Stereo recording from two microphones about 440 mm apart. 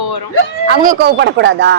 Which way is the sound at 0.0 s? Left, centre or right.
Left.